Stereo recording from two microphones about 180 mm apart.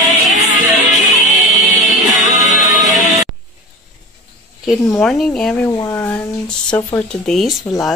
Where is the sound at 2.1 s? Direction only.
40° left (ahead or behind).